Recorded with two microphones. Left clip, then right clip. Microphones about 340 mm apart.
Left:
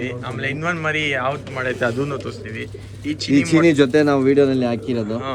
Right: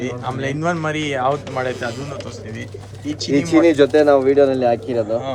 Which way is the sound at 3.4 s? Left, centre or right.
Left.